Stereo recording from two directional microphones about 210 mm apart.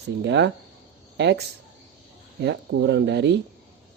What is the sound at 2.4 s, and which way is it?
Speech, 55° right (ahead or behind).